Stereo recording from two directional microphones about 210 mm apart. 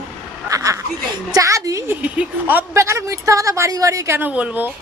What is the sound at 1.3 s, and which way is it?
A woman's voice, 15° right (ahead or behind).